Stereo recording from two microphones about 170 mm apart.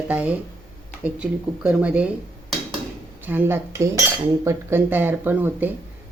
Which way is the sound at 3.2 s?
10° right (ahead or behind).